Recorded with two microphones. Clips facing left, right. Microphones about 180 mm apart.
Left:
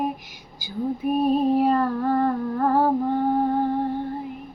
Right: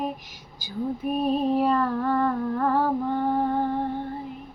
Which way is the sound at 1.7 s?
40° left (ahead or behind).